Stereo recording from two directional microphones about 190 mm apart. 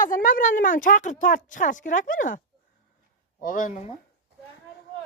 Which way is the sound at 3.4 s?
45° left (ahead or behind).